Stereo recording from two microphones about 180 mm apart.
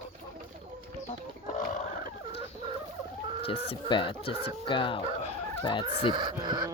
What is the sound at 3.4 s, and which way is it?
Speech, 30° left (ahead or behind).